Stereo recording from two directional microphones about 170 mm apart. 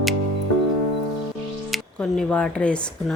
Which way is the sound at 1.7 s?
Centre (ahead or behind).